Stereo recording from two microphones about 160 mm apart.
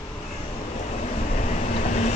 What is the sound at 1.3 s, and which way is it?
Vehicle, 50° left (ahead or behind).